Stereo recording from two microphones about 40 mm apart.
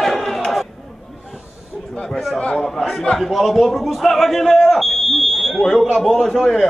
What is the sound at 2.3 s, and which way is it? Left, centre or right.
A man's voice, centre.